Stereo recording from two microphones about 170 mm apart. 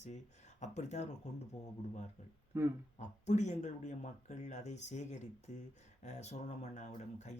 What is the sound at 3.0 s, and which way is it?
Speech, 45° left (ahead or behind).